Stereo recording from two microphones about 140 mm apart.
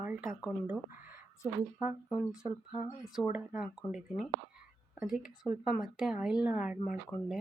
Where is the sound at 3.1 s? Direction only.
5° right (ahead or behind).